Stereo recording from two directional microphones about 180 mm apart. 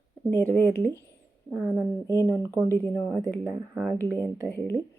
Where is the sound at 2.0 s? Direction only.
15° left (ahead or behind).